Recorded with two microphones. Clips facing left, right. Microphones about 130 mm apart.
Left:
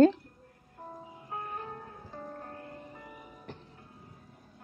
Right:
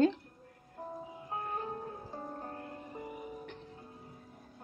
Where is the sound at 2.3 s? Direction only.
25° right (ahead or behind).